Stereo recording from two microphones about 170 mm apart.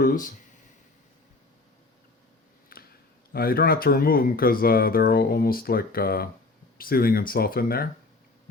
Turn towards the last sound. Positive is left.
turn(degrees=60)  # may be behind; listen again after turning